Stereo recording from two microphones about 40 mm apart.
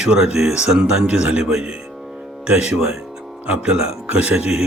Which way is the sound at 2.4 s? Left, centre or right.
Right.